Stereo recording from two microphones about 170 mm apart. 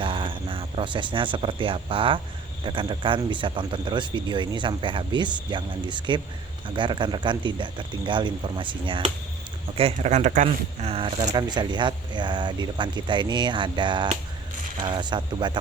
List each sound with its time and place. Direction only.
0.0 s speech: 30° right (ahead or behind)